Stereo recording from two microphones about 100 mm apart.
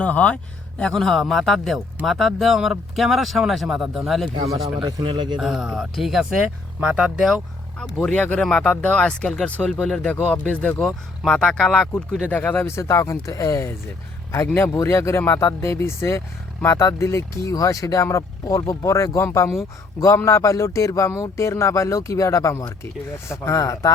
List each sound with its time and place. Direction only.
0.0 s speech: 15° left (ahead or behind); by 4.3 s centre (ahead or behind)
4.8 s speech: 45° right (ahead or behind)
5.4 s speech: 5° right (ahead or behind)
12.3 s speech: 15° left (ahead or behind); by 23.9 s 35° left (ahead or behind)